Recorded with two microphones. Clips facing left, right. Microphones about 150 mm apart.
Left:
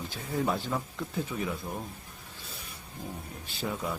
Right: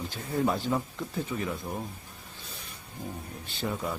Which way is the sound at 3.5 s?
Centre (ahead or behind).